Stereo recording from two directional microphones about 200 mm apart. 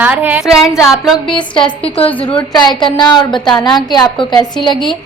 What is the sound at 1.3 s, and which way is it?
A woman's voice, 25° left (ahead or behind).